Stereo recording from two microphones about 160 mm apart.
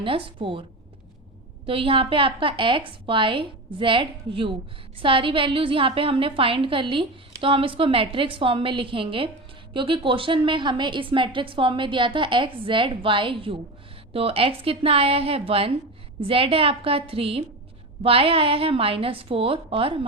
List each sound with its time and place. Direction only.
0.0 s a woman's voice: 35° right (ahead or behind)
1.6 s a woman's voice: 35° right (ahead or behind)